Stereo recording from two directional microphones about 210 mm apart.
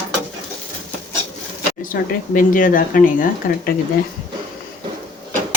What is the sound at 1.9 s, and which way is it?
Speech, 45° left (ahead or behind).